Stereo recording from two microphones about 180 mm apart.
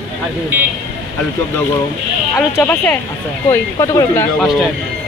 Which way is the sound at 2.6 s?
10° left (ahead or behind).